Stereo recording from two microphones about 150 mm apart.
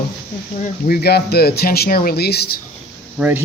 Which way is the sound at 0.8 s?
90° left.